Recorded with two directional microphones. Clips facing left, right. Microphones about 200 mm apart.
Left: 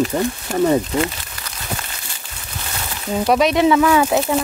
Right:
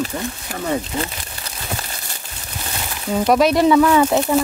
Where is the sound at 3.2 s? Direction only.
Centre (ahead or behind).